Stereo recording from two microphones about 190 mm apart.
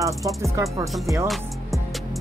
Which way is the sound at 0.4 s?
15° right (ahead or behind).